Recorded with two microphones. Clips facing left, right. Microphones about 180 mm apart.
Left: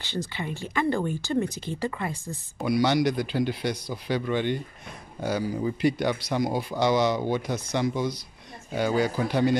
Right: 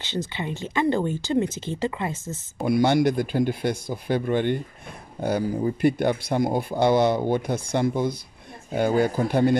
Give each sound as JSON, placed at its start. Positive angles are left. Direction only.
{"t": 0.0, "sound": "speech", "side_deg": -20}
{"t": 2.6, "sound": "speech", "side_deg": -50}